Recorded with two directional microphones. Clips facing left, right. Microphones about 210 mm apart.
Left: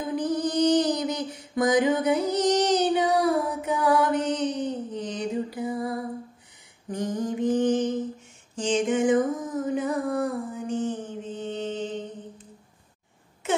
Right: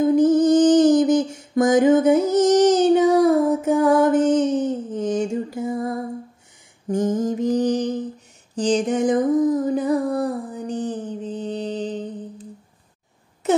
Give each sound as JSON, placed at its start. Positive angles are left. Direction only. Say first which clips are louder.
{"t": 0.0, "sound": "music", "louder": "right 11 dB", "side_deg": -45}
{"t": 6.9, "sound": "mantra", "louder": "right 7 dB", "side_deg": -45}
{"t": 8.5, "sound": "music", "louder": "right 4 dB", "side_deg": -35}
{"t": 13.4, "sound": "a sound", "louder": "right 8 dB", "side_deg": -40}